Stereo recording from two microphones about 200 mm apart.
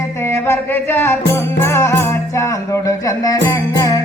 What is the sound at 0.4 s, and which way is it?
Music, 10° left (ahead or behind).